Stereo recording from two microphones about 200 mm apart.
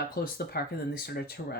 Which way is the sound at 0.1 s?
50° left (ahead or behind).